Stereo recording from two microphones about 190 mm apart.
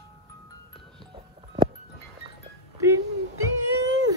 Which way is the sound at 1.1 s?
25° right (ahead or behind).